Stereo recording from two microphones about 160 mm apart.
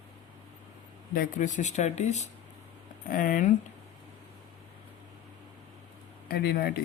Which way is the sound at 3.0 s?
60° left (ahead or behind).